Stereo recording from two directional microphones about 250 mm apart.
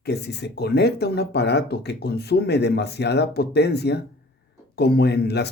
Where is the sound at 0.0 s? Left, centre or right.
Left.